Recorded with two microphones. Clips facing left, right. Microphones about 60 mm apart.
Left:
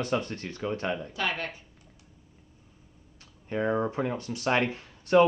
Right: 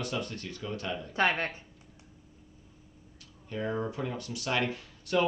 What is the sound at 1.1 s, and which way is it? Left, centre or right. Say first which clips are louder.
Speech: right 3 dB; right.